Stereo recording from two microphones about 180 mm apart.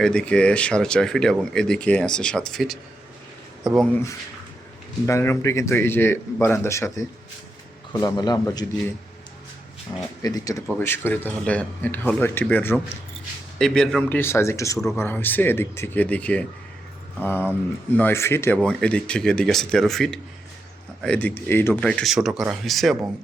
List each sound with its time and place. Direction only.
0.0 s speech: 5° left (ahead or behind)
3.8 s a man's voice: 10° left (ahead or behind)
9.9 s a man's voice: 20° left (ahead or behind); by 23.0 s centre (ahead or behind)